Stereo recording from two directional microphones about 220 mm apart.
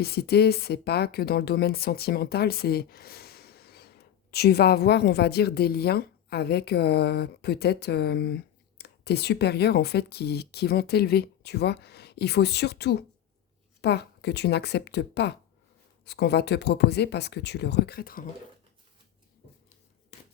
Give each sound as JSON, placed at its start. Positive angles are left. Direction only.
{"t": 0.0, "sound": "a woman's voice", "side_deg": 45}